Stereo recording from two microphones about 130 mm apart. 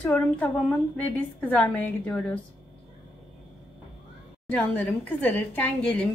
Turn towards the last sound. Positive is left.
turn(degrees=10)  # may be behind; listen again after turning